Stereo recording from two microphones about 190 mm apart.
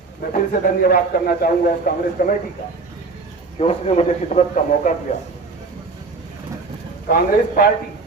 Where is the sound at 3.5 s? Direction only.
35° left (ahead or behind).